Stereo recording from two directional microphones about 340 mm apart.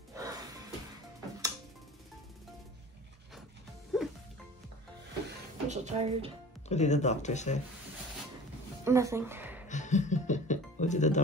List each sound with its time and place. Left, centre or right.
0.1 s music: centre
3.9 s music: centre
5.7 s speech: centre
6.7 s speech: centre
8.8 s a woman's voice: centre
9.7 s music: left